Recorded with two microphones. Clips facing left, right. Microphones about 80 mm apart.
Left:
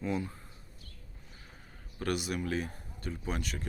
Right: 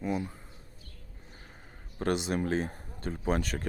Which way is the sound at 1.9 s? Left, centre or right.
Right.